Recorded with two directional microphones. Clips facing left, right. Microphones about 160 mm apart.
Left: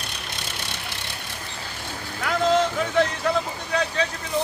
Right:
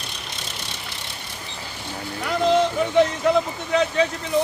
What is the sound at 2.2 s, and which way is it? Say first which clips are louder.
Speech: right 2 dB; 15° right (ahead or behind).